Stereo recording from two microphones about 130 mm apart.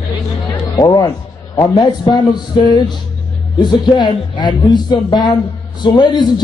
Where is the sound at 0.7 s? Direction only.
25° left (ahead or behind).